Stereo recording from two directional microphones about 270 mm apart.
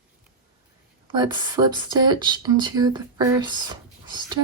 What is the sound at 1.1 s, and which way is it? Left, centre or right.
Speech, centre.